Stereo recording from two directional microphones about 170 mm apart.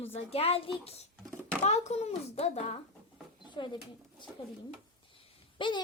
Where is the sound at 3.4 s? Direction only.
25° left (ahead or behind).